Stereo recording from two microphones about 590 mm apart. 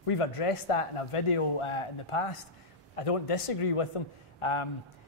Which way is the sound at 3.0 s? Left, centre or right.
Left.